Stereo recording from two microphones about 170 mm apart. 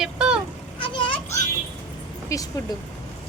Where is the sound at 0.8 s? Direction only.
30° left (ahead or behind).